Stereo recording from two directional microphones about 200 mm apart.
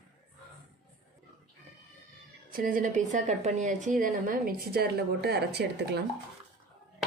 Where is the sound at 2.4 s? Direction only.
45° right (ahead or behind).